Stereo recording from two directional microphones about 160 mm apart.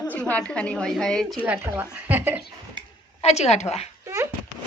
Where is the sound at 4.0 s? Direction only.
20° right (ahead or behind).